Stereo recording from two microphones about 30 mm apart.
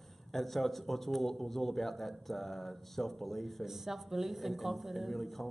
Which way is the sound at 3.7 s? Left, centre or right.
Centre.